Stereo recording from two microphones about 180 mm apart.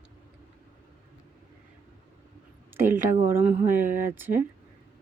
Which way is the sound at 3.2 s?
15° right (ahead or behind).